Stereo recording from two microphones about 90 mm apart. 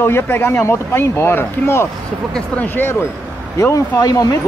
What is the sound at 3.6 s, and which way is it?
Speech, 35° left (ahead or behind).